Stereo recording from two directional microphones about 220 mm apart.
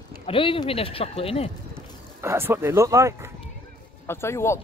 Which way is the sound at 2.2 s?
10° right (ahead or behind).